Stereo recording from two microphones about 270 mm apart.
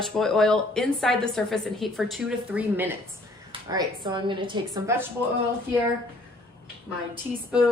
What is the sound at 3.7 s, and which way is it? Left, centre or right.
A woman's voice, centre.